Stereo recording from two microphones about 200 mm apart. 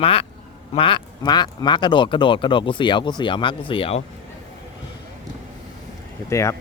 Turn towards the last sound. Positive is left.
turn(degrees=15)  # may be behind; listen again after turning